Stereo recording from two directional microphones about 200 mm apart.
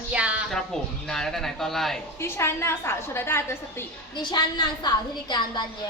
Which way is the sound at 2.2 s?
10° left (ahead or behind).